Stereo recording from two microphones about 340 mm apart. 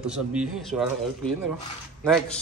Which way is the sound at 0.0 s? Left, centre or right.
Centre.